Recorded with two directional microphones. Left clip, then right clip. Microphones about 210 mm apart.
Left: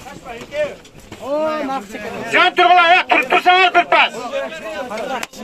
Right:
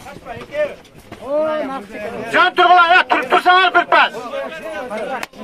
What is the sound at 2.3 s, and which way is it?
A man's voice, 20° right (ahead or behind).